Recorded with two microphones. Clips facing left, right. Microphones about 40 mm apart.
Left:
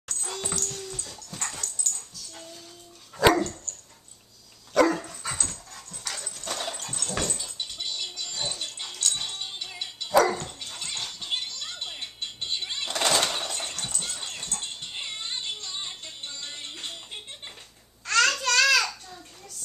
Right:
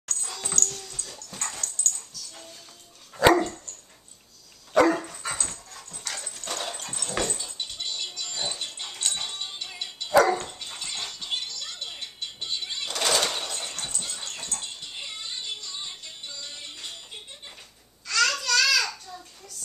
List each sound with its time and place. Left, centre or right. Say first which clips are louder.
0.4 s dog: right 2 dB; centre
3.2 s dog: right 2 dB; centre
4.7 s dog: right 1 dB; centre
10.9 s music: even; centre
11.3 s music: left 1 dB; centre
13.3 s a sound: left 1 dB; centre
14.6 s dog: left 2 dB; left
16.3 s music: left 1 dB; left
18.0 s babbling: left 2 dB; left